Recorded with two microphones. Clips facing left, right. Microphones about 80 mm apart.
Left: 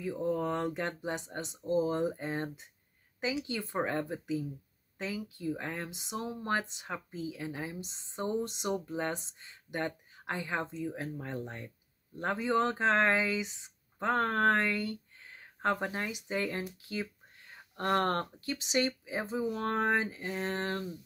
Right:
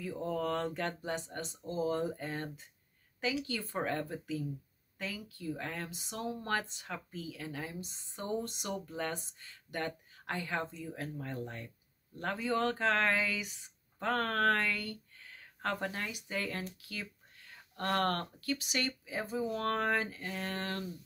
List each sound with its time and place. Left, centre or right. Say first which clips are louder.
0.0 s speech: left 3 dB; left